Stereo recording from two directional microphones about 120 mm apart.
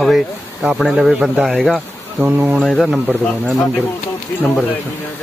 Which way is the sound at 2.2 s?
15° right (ahead or behind).